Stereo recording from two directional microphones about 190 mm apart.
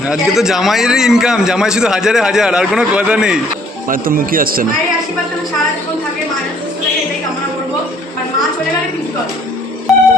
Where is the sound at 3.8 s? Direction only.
50° right (ahead or behind).